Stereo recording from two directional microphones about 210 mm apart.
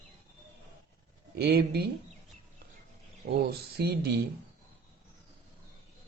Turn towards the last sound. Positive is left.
turn(degrees=-50)  # may be behind; listen again after turning